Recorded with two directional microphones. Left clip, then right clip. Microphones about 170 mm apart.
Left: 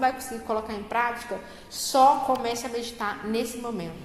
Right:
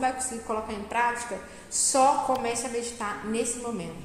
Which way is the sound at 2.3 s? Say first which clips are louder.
Left 1 dB; 15° left (ahead or behind).